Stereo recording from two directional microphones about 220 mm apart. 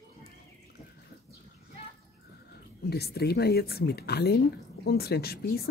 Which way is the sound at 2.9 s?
45° left (ahead or behind).